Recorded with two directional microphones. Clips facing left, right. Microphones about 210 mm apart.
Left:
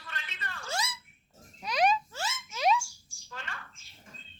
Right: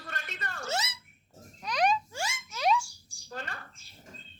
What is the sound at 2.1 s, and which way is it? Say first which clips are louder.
Boing: right 1 dB; 10° right (ahead or behind).